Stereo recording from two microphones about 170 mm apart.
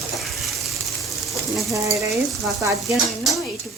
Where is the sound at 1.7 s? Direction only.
20° right (ahead or behind).